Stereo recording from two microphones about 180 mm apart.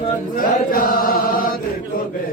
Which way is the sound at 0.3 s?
50° left (ahead or behind).